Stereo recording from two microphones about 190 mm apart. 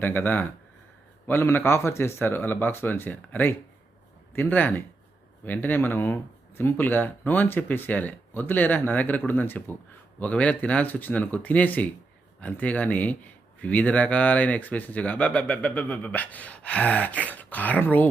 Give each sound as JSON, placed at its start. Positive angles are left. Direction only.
{"t": 0.0, "sound": "speech", "side_deg": 10}